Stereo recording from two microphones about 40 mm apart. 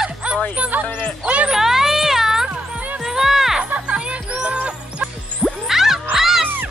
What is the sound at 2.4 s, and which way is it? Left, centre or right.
Music, right.